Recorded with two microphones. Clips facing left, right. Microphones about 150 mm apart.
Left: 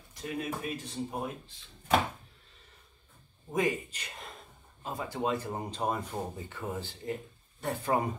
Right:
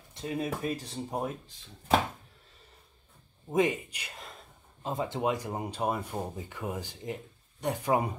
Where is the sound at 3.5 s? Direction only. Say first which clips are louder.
Right 3 dB; 20° right (ahead or behind).